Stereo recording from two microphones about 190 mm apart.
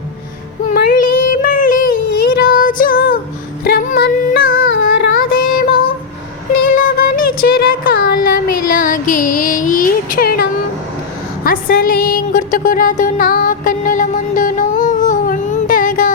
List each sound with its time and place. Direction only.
0.7 s child singing: 50° left (ahead or behind)
3.6 s female singing: 50° left (ahead or behind)
4.5 s a sound: 90° left
6.7 s music: 50° left (ahead or behind)